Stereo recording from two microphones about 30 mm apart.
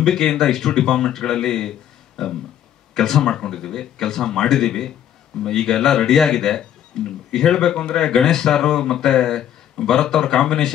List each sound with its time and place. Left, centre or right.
0.0 s speech: left